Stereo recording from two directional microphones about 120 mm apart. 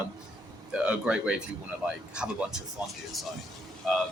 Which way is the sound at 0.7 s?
10° right (ahead or behind).